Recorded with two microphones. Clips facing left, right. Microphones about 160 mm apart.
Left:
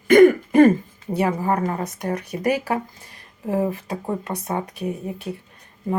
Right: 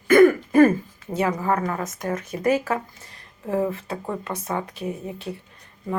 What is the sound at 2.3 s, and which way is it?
Speech, 15° left (ahead or behind).